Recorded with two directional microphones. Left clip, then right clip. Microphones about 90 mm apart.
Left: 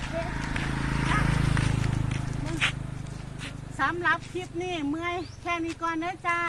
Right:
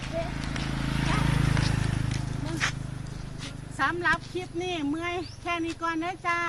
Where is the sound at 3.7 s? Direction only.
Centre (ahead or behind).